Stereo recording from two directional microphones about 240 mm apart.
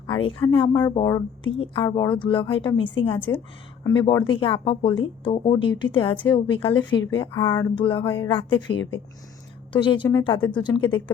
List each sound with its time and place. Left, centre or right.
0.3 s a woman's voice: left
3.3 s a sound: centre
3.8 s a woman's voice: centre
7.3 s a sound: centre
8.0 s a woman's voice: centre
9.7 s a woman's voice: centre